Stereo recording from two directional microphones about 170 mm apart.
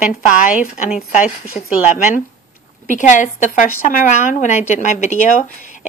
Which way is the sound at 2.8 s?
50° left (ahead or behind).